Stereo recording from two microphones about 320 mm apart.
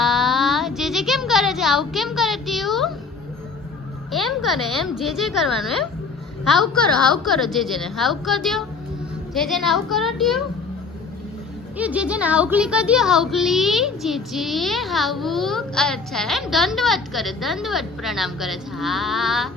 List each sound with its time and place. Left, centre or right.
0.0 s a sound: centre
4.1 s a child's voice: centre
11.8 s a child's voice: centre